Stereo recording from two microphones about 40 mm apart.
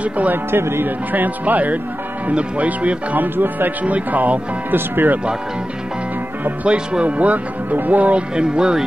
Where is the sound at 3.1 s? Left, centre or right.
Right.